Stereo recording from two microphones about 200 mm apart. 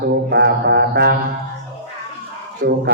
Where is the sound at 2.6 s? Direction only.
45° right (ahead or behind).